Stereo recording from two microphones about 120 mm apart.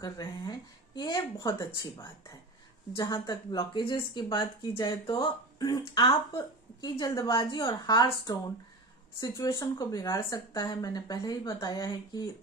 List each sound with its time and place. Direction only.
0.0 s speech: 35° left (ahead or behind)